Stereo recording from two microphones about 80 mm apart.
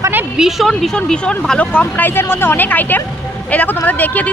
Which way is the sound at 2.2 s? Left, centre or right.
Left.